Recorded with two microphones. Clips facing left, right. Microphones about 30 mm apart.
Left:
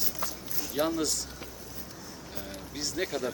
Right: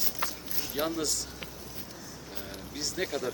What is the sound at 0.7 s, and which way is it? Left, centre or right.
Speech, centre.